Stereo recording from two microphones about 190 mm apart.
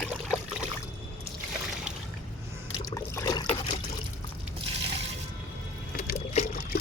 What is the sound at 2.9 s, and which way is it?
Trickle, 15° left (ahead or behind).